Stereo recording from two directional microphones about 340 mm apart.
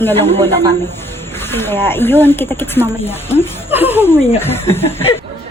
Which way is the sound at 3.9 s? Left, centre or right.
Centre.